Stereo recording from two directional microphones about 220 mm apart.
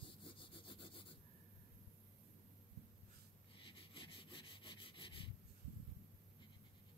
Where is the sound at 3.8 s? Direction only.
25° left (ahead or behind).